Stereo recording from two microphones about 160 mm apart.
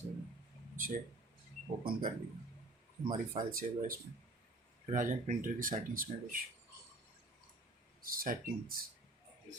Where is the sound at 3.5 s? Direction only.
60° right (ahead or behind).